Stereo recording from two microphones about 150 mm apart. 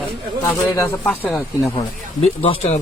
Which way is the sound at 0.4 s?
15° left (ahead or behind).